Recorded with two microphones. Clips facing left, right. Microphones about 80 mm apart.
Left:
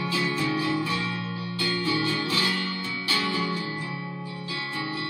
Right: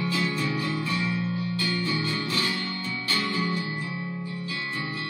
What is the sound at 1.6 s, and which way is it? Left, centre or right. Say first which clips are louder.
Music: left 5 dB; left.